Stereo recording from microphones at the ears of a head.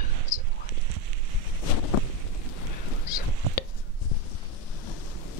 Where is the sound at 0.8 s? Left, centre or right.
Right.